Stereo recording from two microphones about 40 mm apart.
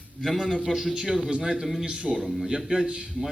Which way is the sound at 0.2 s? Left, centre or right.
Centre.